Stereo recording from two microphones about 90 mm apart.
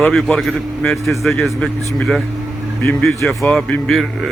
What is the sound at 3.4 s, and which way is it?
Speech, 10° left (ahead or behind).